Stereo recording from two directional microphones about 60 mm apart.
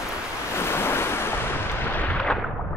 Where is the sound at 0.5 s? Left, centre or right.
Left.